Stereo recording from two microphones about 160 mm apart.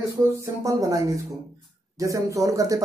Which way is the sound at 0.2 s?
20° right (ahead or behind).